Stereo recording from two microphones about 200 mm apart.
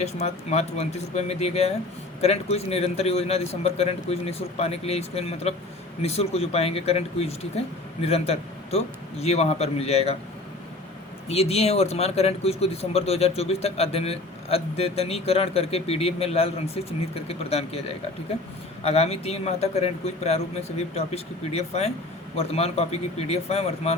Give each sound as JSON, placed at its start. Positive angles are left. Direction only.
{"t": 0.0, "sound": "speech", "side_deg": 35}
{"t": 11.3, "sound": "speech", "side_deg": 30}